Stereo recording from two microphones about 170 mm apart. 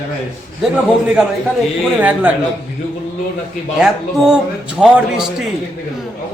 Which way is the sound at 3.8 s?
5° right (ahead or behind).